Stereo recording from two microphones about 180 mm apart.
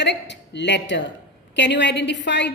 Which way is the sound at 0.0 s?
75° left (ahead or behind).